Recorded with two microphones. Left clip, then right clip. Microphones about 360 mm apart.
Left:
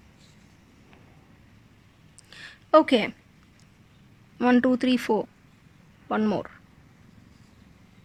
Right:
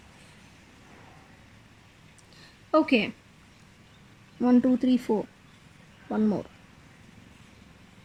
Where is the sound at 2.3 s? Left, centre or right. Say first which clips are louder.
Left 6 dB; left.